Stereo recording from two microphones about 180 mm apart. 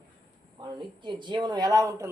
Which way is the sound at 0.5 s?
25° right (ahead or behind).